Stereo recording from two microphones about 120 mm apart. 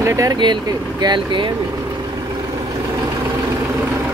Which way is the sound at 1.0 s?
40° right (ahead or behind).